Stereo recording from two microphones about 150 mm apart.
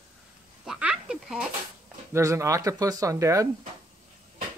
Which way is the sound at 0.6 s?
5° right (ahead or behind).